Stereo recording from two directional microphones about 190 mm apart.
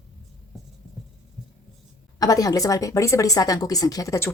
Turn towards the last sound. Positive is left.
turn(degrees=15)  # may be behind; listen again after turning